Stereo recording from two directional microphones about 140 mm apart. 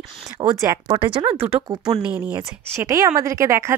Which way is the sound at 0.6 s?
30° right (ahead or behind).